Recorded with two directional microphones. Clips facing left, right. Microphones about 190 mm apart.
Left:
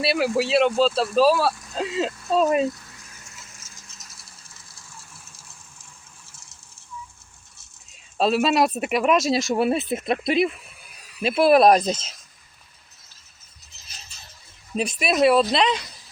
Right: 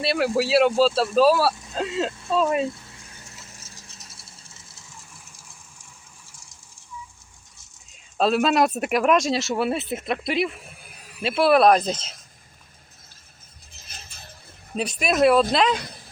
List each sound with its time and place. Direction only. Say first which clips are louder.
0.0 s speech: even; 5° left (ahead or behind)
2.6 s vehicle: left 3 dB; 25° right (ahead or behind)
8.2 s speech: even; centre (ahead or behind); by 10.5 s 20° left (ahead or behind)
10.6 s a sound: right 4 dB; 50° right (ahead or behind)
11.2 s speech: left 2 dB; 15° left (ahead or behind)
13.7 s a sound: right 3 dB; 55° right (ahead or behind)
14.8 s speech: even; 5° left (ahead or behind)
15.8 s speech: right 6 dB; 55° right (ahead or behind)